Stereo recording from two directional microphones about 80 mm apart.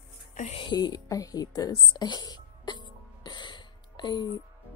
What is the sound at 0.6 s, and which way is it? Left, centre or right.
Speech, left.